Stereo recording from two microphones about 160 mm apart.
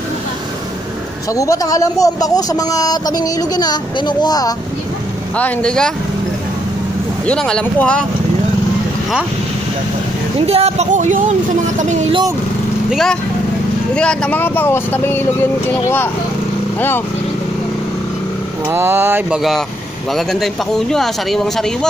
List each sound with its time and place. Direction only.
1.3 s speech: 20° left (ahead or behind)
5.4 s speech: 5° left (ahead or behind)
7.2 s speech: 5° left (ahead or behind)
10.4 s speech: 40° right (ahead or behind)
12.9 s speech: centre (ahead or behind)
18.7 s speech: 15° right (ahead or behind)
20.2 s speech: centre (ahead or behind)